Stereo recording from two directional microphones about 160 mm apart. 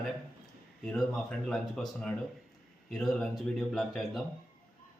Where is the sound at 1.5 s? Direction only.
Centre (ahead or behind).